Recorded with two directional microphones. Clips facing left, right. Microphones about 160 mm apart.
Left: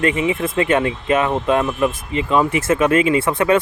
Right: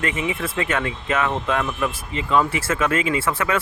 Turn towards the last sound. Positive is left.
turn(degrees=20)  # may be behind; listen again after turning